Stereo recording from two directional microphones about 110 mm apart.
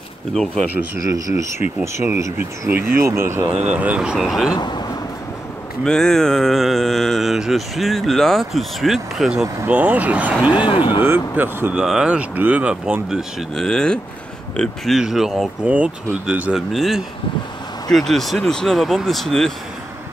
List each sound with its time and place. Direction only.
0.3 s speech: 5° left (ahead or behind)
0.9 s speech: 30° right (ahead or behind)
2.9 s speech: 25° right (ahead or behind)
3.7 s speech: 15° right (ahead or behind)
4.6 s speech: 40° left (ahead or behind)
5.9 s speech: 5° left (ahead or behind)
9.7 s speech: 15° right (ahead or behind)
10.7 s speech: 50° left (ahead or behind)
11.3 s speech: 20° right (ahead or behind)
11.7 s speech: 5° right (ahead or behind)